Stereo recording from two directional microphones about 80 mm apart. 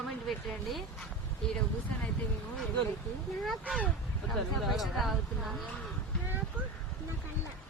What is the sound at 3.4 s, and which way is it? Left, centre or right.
A woman's voice, centre.